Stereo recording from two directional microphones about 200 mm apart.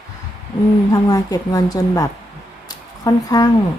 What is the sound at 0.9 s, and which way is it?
Speech, 15° left (ahead or behind).